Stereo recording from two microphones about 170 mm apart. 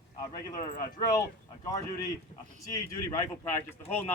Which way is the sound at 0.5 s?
20° left (ahead or behind).